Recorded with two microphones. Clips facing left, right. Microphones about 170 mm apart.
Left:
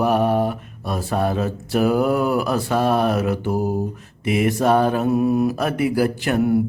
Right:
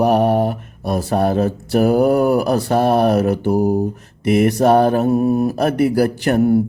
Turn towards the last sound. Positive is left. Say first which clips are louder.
# right 4 dB
turn(degrees=-40)  # may be behind; listen again after turning